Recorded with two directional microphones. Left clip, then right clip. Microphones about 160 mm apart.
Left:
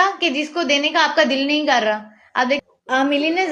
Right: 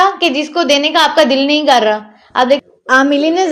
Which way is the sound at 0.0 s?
30° right (ahead or behind).